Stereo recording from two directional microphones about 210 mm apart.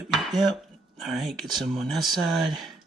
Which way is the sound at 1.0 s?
Centre (ahead or behind).